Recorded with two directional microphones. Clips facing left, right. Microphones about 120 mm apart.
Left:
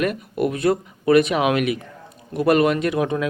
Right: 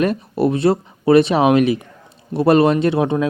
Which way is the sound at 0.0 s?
30° right (ahead or behind).